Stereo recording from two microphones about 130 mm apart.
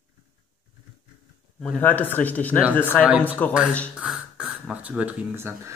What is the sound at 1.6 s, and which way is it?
Speech, 10° left (ahead or behind).